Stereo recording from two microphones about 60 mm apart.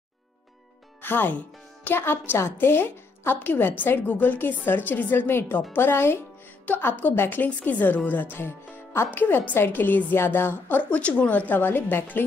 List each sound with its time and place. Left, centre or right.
1.0 s a woman's voice: left
9.2 s a woman's voice: left